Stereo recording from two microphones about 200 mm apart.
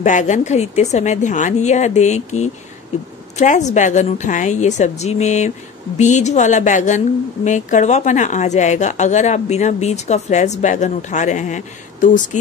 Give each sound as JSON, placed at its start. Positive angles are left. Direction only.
{"t": 0.0, "sound": "a woman's voice", "side_deg": 35}